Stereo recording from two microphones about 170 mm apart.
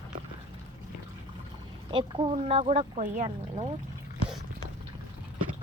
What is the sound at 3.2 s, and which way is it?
Speech, 35° right (ahead or behind).